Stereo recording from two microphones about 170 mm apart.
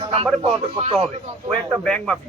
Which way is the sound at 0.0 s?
35° right (ahead or behind).